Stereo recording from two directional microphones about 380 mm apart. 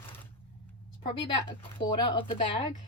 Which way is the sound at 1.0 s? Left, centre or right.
Left.